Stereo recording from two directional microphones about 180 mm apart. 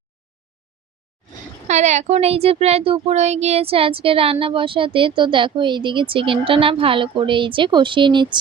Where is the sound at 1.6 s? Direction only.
40° right (ahead or behind).